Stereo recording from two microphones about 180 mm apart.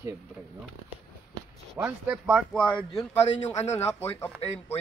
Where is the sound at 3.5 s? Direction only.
40° left (ahead or behind).